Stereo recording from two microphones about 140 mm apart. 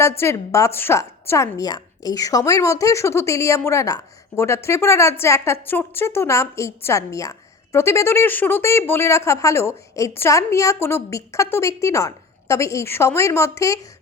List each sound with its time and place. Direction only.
0.2 s a woman's voice: 20° left (ahead or behind)